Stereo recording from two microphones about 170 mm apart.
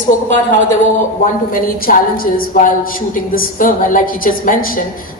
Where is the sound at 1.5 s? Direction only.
55° left (ahead or behind).